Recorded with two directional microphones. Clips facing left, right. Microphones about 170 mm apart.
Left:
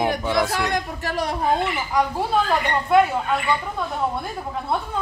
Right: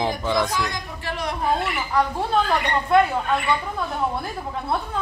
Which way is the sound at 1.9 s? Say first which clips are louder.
Even; 5° left (ahead or behind).